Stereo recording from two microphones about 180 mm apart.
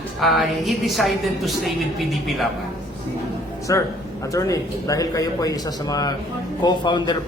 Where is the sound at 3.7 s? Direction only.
20° left (ahead or behind).